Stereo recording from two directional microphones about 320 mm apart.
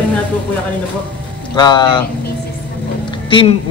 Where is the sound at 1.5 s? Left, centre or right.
Centre.